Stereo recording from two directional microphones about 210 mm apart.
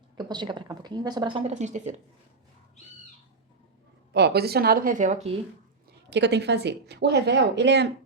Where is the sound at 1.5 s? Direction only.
35° right (ahead or behind).